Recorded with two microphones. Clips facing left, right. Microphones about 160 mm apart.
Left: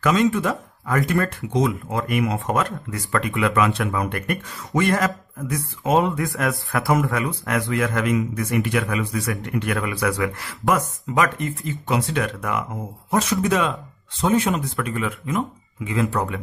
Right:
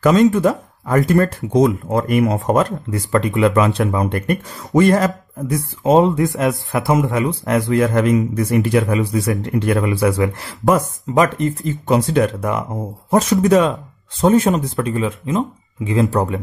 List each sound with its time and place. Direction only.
0.0 s speech: 40° right (ahead or behind)
14.5 s speech: 30° right (ahead or behind)